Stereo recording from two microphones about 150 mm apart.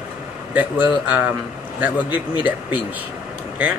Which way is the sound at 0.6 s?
10° right (ahead or behind).